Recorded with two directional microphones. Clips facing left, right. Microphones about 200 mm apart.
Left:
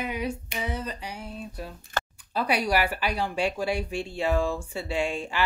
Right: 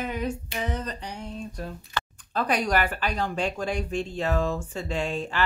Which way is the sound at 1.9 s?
45° left (ahead or behind).